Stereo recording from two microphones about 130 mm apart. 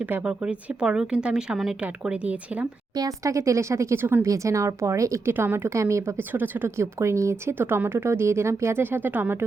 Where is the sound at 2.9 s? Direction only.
25° right (ahead or behind).